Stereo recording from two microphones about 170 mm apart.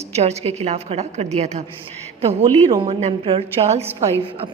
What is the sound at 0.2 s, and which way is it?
A woman's voice, 40° right (ahead or behind).